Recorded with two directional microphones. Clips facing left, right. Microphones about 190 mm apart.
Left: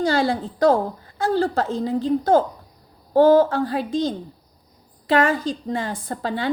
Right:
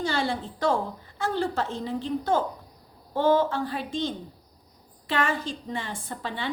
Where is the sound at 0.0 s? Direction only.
40° left (ahead or behind).